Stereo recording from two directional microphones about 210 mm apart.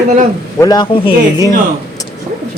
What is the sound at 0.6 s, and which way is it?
Speech, 20° left (ahead or behind).